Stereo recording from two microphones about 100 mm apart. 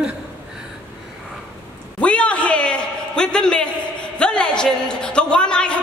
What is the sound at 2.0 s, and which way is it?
A man's voice, 10° left (ahead or behind).